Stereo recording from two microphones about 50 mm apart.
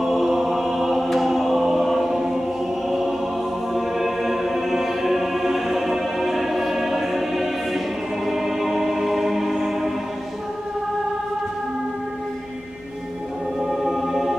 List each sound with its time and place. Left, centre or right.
0.0 s music: centre
13.6 s music: centre